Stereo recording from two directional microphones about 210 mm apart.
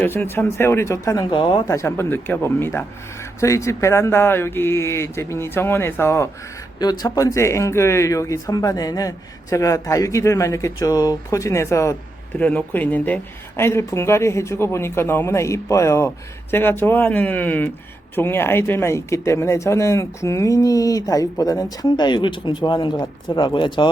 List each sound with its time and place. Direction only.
0.0 s speech: 10° left (ahead or behind)